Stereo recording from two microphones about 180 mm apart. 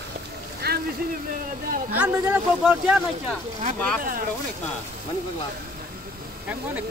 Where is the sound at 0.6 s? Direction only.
60° right (ahead or behind).